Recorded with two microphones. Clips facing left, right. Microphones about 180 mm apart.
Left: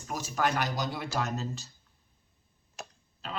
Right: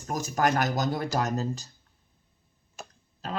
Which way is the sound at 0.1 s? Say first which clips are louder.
Right 4 dB; 45° right (ahead or behind).